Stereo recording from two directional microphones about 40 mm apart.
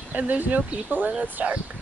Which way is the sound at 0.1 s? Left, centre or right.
Right.